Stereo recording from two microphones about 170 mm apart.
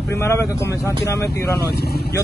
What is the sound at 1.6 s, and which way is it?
Speech, 70° left (ahead or behind).